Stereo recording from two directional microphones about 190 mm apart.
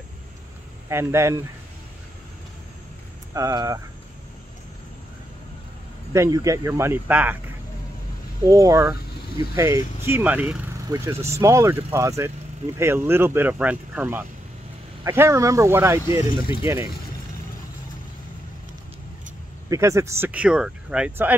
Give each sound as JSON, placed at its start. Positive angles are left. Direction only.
{"t": 0.8, "sound": "speech", "side_deg": -15}
{"t": 3.3, "sound": "speech", "side_deg": -15}
{"t": 6.1, "sound": "speech", "side_deg": -15}
{"t": 8.5, "sound": "speech", "side_deg": -15}
{"t": 19.7, "sound": "speech", "side_deg": -15}